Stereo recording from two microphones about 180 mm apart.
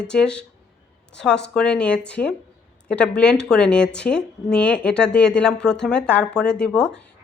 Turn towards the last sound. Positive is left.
turn(degrees=5)  # may be behind; listen again after turning